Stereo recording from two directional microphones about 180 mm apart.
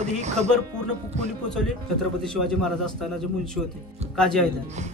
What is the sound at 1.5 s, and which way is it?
Speech, 5° left (ahead or behind).